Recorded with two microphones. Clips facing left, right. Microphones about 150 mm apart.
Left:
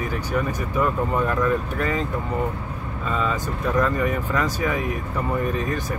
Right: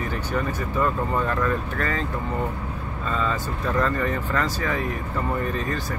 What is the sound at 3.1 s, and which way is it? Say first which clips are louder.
Speech: left 1 dB; 10° left (ahead or behind).